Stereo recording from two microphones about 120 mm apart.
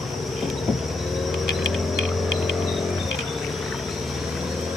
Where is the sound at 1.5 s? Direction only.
5° right (ahead or behind).